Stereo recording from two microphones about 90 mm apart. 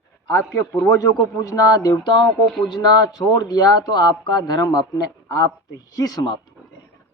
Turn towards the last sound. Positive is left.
turn(degrees=45)  # may be behind; listen again after turning